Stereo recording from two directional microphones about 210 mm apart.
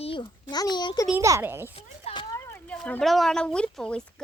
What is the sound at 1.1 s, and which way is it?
Speech, 10° right (ahead or behind).